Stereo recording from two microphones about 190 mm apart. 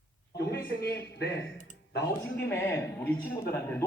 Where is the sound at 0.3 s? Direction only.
55° left (ahead or behind).